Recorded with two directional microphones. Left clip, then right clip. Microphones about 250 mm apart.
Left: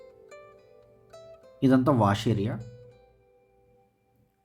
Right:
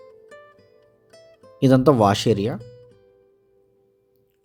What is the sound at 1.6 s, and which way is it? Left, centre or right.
Speech, right.